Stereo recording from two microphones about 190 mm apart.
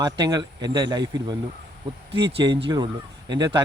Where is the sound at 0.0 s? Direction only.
20° right (ahead or behind).